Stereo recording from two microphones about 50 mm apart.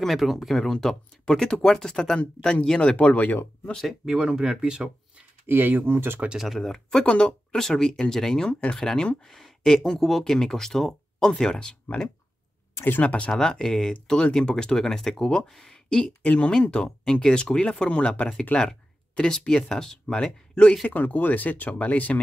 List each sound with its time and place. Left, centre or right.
0.0 s speech: centre; by 3.3 s left
4.0 s speech: centre
5.5 s speech: right
6.2 s speech: centre
6.5 s speech: centre
8.5 s speech: left
8.7 s speech: centre
13.0 s speech: left
13.3 s speech: centre
20.9 s speech: left